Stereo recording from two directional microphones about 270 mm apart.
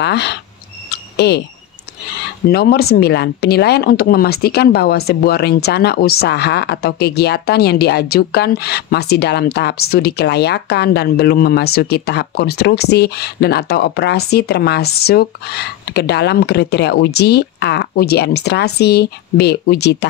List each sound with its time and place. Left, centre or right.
0.0 s speech: left
0.9 s a sound: left
2.4 s speech: left